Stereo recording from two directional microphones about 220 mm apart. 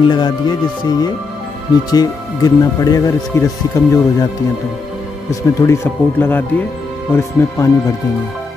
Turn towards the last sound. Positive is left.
turn(degrees=15)  # may be behind; listen again after turning